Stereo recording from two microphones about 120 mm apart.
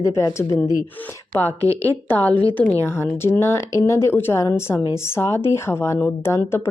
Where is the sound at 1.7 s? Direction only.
25° right (ahead or behind).